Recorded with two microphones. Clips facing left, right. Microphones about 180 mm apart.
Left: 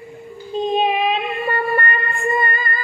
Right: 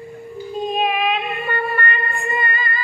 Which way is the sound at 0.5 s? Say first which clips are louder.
Left 3 dB; 25° left (ahead or behind).